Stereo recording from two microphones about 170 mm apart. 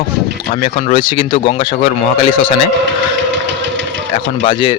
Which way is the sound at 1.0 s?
30° left (ahead or behind).